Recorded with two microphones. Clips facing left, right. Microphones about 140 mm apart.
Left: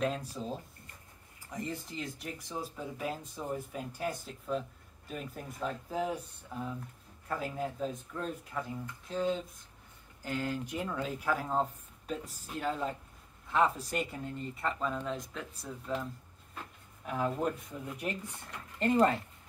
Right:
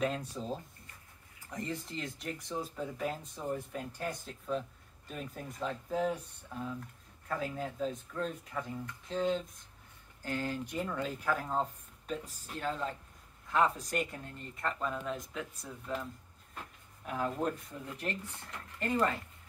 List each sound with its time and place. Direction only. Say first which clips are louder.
0.0 s speech: left 1 dB; centre (ahead or behind)
1.6 s speech: even; 5° left (ahead or behind)
7.2 s speech: left 1 dB; 5° left (ahead or behind)
18.8 s speech: left 5 dB; 25° left (ahead or behind)